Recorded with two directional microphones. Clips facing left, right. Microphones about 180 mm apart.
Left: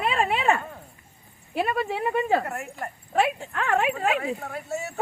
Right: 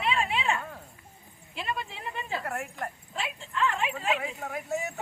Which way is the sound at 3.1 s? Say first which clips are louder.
Left 11 dB; 65° left (ahead or behind).